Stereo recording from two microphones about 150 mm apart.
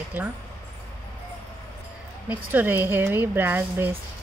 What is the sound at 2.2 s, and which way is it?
Speech, 10° right (ahead or behind).